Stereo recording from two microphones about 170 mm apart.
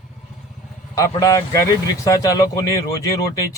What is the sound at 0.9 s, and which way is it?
A man's voice, 20° left (ahead or behind).